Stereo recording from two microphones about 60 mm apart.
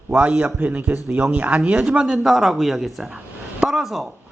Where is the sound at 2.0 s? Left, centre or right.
Centre.